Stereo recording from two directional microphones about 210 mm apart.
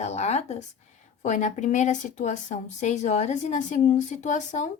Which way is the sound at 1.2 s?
35° left (ahead or behind).